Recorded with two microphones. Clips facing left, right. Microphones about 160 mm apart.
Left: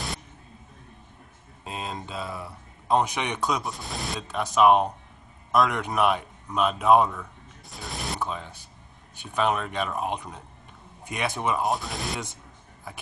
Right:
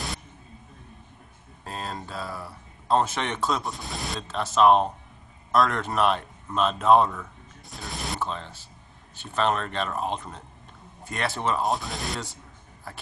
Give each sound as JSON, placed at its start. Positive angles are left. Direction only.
{"t": 1.6, "sound": "a sound", "side_deg": 20}
{"t": 2.2, "sound": "speech", "side_deg": 0}
{"t": 2.9, "sound": "speech", "side_deg": 15}
{"t": 3.6, "sound": "speech", "side_deg": 0}
{"t": 4.3, "sound": "speech", "side_deg": 15}
{"t": 11.6, "sound": "speech", "side_deg": 0}